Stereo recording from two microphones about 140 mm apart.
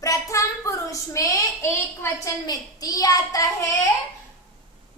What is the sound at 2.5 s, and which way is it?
A woman's voice, 25° left (ahead or behind).